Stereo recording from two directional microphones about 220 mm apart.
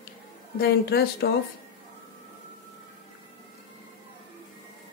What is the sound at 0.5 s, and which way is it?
Speech, 45° left (ahead or behind).